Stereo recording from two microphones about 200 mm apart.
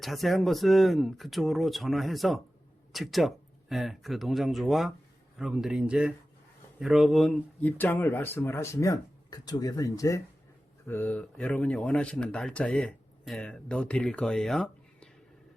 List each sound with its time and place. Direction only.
0.0 s speech: centre (ahead or behind)